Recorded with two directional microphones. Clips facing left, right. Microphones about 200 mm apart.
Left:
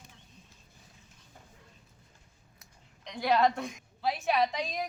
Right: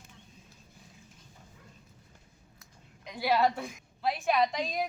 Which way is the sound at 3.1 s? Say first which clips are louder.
Left 1 dB; 5° right (ahead or behind).